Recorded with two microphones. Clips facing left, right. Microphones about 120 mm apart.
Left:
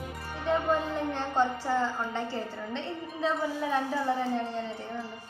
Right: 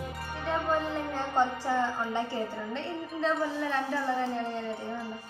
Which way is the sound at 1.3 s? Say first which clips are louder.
Even; 15° right (ahead or behind).